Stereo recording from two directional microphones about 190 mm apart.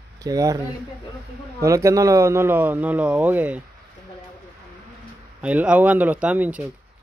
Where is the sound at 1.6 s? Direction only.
15° right (ahead or behind).